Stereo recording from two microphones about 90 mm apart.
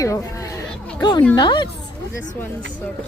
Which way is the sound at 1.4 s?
55° left (ahead or behind).